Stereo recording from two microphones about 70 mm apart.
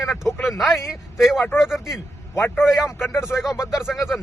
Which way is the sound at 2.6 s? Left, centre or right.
Centre.